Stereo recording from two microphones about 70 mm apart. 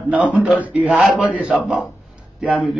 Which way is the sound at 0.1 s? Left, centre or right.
Centre.